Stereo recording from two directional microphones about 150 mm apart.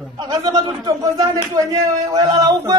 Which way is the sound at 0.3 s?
25° right (ahead or behind).